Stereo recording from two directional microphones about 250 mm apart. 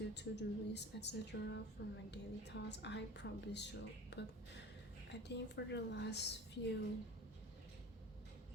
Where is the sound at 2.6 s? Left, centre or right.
Left.